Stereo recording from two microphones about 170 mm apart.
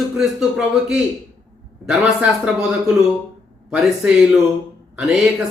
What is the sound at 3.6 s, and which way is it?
Speech, 5° right (ahead or behind).